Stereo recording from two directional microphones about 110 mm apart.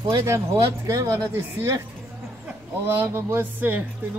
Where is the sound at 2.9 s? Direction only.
25° right (ahead or behind).